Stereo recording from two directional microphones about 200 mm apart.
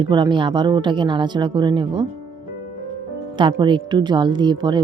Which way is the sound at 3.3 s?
20° right (ahead or behind).